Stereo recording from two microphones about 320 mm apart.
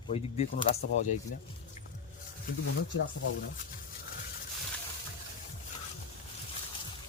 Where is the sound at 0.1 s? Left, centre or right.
Left.